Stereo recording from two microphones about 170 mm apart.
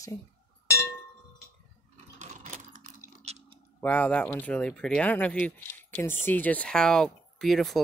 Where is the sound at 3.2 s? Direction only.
40° right (ahead or behind).